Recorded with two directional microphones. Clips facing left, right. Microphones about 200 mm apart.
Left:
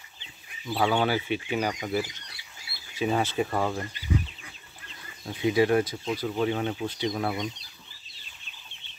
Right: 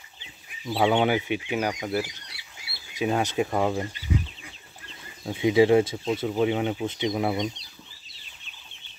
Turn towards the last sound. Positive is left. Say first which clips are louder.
# right 3 dB
turn(degrees=-15)  # may be behind; listen again after turning